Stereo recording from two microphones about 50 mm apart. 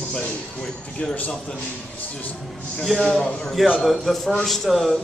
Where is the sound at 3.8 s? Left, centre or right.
Centre.